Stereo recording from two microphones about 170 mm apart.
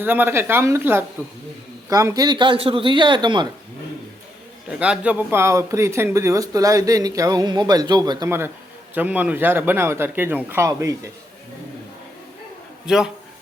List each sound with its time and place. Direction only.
0.0 s speech: 10° right (ahead or behind)
4.7 s speech: 5° right (ahead or behind)
12.8 s a man's voice: 5° right (ahead or behind)